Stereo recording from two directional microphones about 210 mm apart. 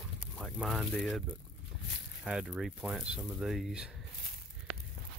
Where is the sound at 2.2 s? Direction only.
5° right (ahead or behind).